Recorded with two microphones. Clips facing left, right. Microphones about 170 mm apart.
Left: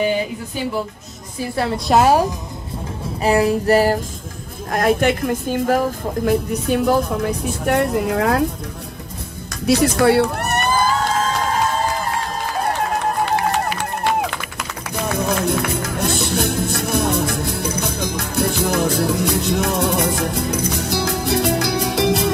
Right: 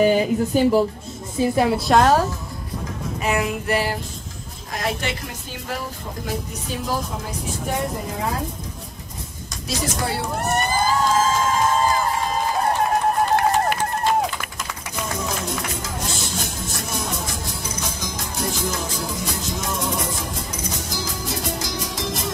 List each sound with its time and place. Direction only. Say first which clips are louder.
0.0 s speech: right 3 dB; 40° right (ahead or behind)
1.4 s a woman's voice: right 3 dB; 15° right (ahead or behind)
1.9 s speech: left 4 dB; 10° left (ahead or behind)
3.2 s a sound: left 7 dB; 35° left (ahead or behind)
4.6 s speech: left 10 dB; 55° left (ahead or behind); by 8.5 s 75° left (ahead or behind)
9.5 s a sound: left 11 dB; 65° left (ahead or behind)
15.0 s music: left 8 dB; 60° left (ahead or behind)